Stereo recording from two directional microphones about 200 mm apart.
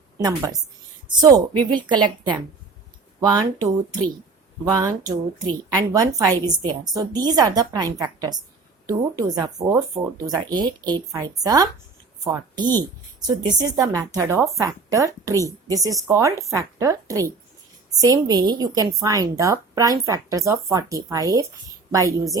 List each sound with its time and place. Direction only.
0.2 s a woman's voice: 20° right (ahead or behind)
4.7 s a woman's voice: 20° right (ahead or behind)